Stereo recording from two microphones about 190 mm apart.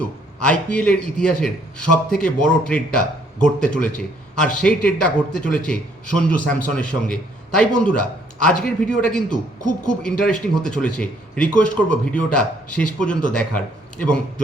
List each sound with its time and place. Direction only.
0.0 s a man's voice: 5° left (ahead or behind)
9.6 s speech: 45° left (ahead or behind)
10.0 s a man's voice: 5° left (ahead or behind)